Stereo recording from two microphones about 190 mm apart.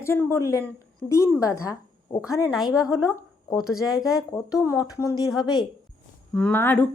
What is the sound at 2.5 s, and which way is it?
A woman's voice, centre (ahead or behind).